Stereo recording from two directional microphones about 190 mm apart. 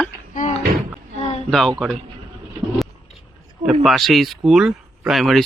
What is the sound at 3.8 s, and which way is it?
Speech, centre (ahead or behind).